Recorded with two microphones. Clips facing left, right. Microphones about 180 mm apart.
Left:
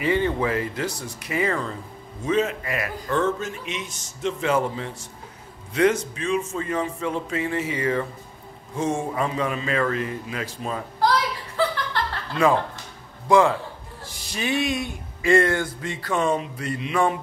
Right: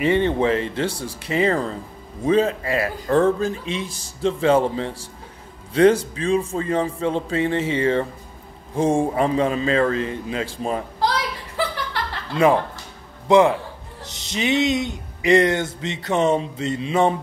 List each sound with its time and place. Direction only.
0.0 s music: 25° right (ahead or behind)
2.2 s speech: 30° right (ahead or behind)
8.7 s music: 30° right (ahead or behind)
11.9 s chuckle: 20° right (ahead or behind)
13.3 s music: 20° right (ahead or behind)